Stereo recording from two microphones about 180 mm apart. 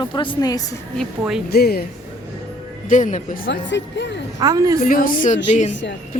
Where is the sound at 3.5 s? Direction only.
75° left (ahead or behind).